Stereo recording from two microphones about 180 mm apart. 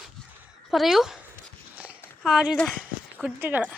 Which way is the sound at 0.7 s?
Centre (ahead or behind).